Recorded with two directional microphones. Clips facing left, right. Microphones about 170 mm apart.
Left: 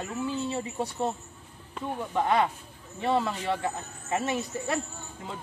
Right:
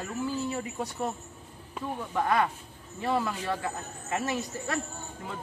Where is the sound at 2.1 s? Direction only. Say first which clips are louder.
Left 1 dB; 20° left (ahead or behind).